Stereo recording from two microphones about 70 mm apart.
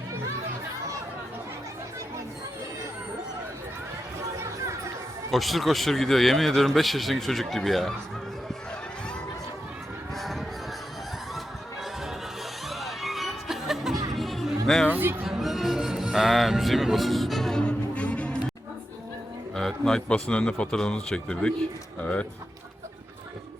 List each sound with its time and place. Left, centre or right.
4.4 s chatter: right
5.3 s a man's voice: centre
10.2 s a sound: centre
12.6 s music: centre
14.9 s music: right
15.2 s music: centre
17.6 s music: centre
19.5 s a man's voice: centre